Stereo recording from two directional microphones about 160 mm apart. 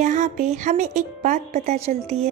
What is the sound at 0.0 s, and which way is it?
A woman's voice, 45° right (ahead or behind).